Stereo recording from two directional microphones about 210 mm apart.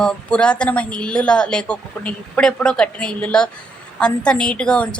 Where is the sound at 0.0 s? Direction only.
5° left (ahead or behind).